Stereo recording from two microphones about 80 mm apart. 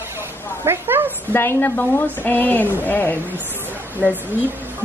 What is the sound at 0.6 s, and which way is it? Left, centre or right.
Dog, right.